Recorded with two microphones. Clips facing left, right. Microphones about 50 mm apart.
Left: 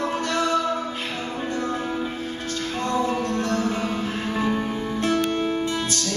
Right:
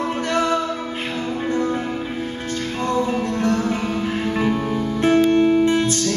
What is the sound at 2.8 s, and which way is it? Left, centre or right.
Music, right.